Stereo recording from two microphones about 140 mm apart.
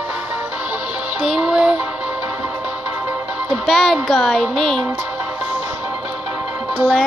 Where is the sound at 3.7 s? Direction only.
Centre (ahead or behind).